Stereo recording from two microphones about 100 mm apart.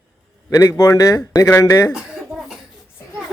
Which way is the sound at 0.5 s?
30° left (ahead or behind).